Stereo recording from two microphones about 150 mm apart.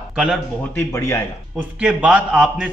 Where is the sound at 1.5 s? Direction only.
5° right (ahead or behind).